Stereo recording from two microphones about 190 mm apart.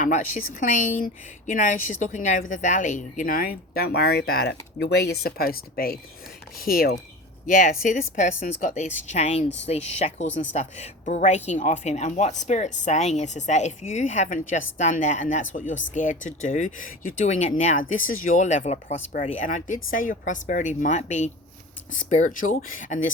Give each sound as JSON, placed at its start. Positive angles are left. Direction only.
{"t": 0.0, "sound": "speech", "side_deg": 45}